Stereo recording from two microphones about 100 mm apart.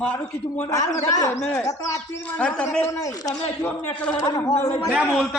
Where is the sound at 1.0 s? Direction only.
35° left (ahead or behind).